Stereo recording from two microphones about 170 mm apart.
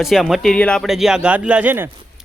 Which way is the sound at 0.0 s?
Centre (ahead or behind).